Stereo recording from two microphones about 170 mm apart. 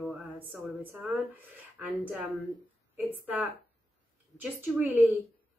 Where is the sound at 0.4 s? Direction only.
10° right (ahead or behind).